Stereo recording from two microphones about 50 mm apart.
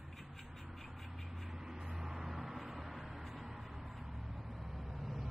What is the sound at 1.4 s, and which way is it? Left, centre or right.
Vehicle, centre.